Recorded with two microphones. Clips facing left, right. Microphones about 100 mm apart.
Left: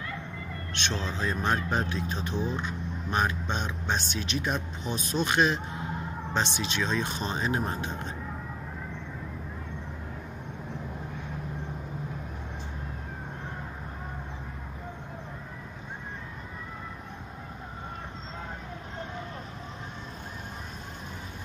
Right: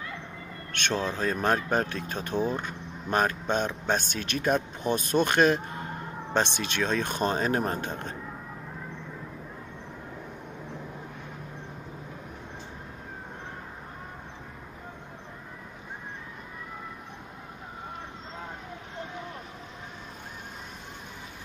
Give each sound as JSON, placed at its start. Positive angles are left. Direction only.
{"t": 0.7, "sound": "speech", "side_deg": -50}